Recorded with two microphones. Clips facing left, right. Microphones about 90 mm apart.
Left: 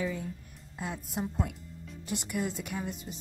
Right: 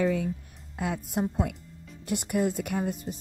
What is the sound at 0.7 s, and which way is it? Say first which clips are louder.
Speech: right 6 dB; 60° right (ahead or behind).